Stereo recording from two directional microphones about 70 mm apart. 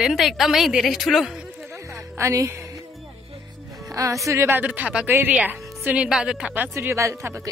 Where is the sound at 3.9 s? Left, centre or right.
Right.